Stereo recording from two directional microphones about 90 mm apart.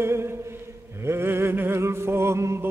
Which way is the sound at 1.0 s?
25° right (ahead or behind).